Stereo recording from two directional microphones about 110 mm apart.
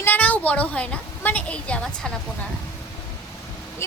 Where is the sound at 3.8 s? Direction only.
25° left (ahead or behind).